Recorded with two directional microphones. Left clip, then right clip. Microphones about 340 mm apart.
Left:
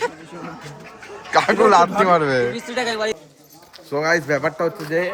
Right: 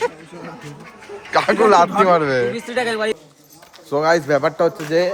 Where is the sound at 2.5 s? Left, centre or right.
Right.